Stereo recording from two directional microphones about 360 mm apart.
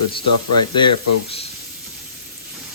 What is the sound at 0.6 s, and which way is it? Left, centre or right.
Speech, centre.